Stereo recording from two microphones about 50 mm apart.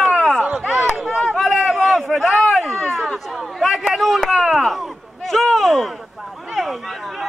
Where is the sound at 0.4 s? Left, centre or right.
Right.